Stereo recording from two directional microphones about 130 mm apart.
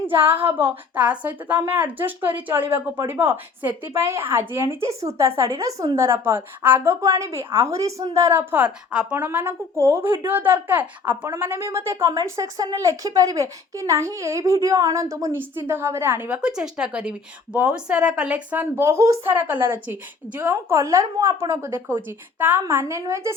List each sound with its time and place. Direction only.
0.3 s a woman's voice: 15° right (ahead or behind)
6.0 s a woman's voice: 20° right (ahead or behind)